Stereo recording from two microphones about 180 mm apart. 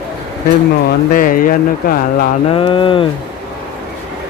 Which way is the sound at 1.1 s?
50° left (ahead or behind).